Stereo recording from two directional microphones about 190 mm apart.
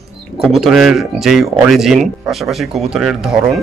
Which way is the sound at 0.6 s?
Centre (ahead or behind).